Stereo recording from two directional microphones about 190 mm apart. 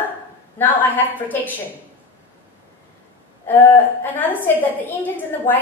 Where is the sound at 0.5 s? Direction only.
10° left (ahead or behind).